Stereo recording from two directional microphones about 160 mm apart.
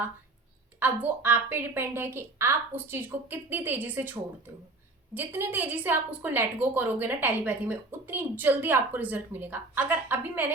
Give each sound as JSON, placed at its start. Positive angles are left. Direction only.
{"t": 0.8, "sound": "a woman's voice", "side_deg": -10}